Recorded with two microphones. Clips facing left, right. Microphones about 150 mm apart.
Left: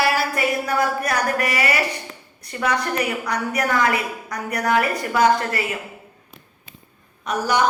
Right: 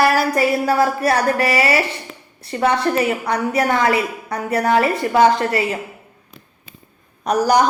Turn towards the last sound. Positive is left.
turn(degrees=-40)  # may be behind; listen again after turning